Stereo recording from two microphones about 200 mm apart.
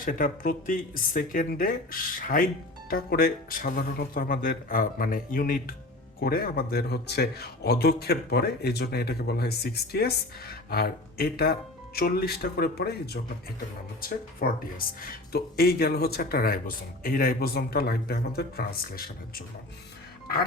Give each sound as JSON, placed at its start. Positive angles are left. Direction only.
{"t": 0.0, "sound": "speech", "side_deg": 45}
{"t": 14.0, "sound": "speech", "side_deg": 45}